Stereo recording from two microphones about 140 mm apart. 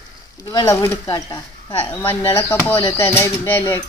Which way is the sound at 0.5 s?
25° left (ahead or behind).